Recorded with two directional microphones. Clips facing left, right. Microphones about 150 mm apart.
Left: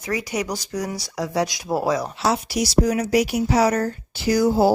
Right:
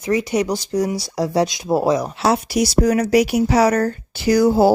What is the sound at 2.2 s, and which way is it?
Speech, 60° right (ahead or behind).